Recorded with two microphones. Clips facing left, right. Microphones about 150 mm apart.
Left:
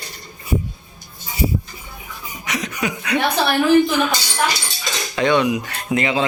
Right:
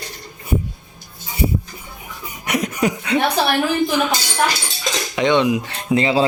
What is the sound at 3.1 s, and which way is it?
Speech, 25° right (ahead or behind).